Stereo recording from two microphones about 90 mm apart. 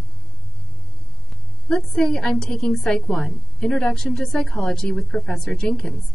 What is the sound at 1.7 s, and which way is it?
A woman's voice, 5° left (ahead or behind).